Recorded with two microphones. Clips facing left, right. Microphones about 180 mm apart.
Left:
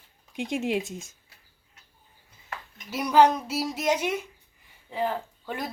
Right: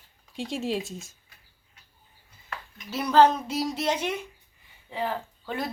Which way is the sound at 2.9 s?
10° left (ahead or behind).